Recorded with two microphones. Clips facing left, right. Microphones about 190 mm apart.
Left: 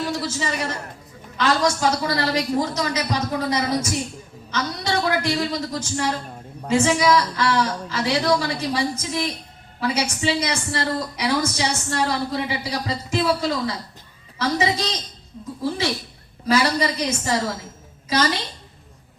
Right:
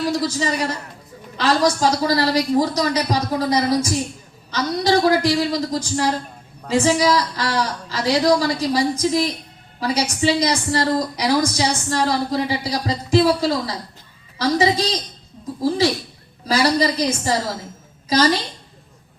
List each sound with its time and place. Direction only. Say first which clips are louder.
0.0 s a woman's voice: right 5 dB; 35° right (ahead or behind)
16.5 s a woman's voice: right 2 dB; 35° right (ahead or behind)